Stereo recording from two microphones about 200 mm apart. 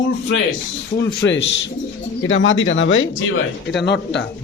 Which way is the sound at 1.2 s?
65° left (ahead or behind).